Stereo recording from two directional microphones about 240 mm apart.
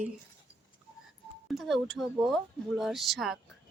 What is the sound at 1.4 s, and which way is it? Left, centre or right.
Speech, centre.